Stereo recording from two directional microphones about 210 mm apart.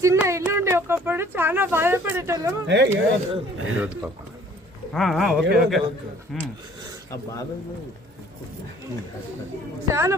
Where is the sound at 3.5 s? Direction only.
75° right (ahead or behind).